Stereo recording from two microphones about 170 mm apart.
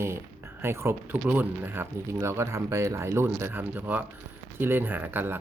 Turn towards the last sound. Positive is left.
turn(degrees=-10)  # may be behind; listen again after turning